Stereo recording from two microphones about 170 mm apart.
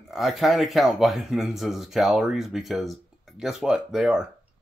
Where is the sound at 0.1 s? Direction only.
Centre (ahead or behind).